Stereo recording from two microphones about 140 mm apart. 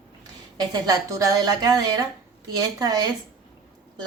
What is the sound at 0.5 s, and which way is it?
Speech, 25° right (ahead or behind).